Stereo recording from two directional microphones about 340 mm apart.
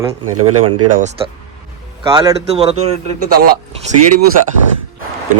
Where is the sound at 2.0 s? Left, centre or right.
Centre.